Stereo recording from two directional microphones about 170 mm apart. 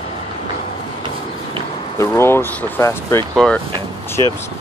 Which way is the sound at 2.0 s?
15° left (ahead or behind).